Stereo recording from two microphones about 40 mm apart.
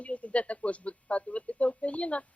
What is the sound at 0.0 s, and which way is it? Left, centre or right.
Speech, left.